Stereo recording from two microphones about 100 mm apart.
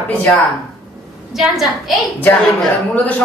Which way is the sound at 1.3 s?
Centre (ahead or behind).